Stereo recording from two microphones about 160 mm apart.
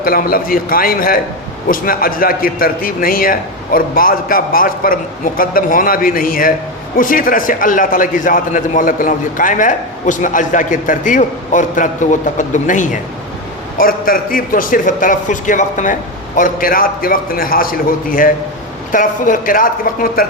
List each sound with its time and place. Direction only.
0.0 s a man's voice: 65° left (ahead or behind)
13.7 s a man's voice: 60° left (ahead or behind)